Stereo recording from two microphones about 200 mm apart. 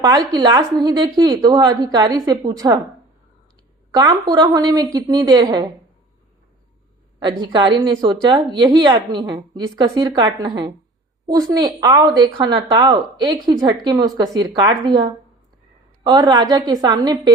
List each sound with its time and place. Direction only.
0.0 s speech: 20° right (ahead or behind)
3.9 s speech: 20° right (ahead or behind)
7.2 s speech: 20° right (ahead or behind)
16.0 s speech: 20° right (ahead or behind)